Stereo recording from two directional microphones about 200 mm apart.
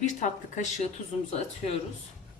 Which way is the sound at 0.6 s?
35° left (ahead or behind).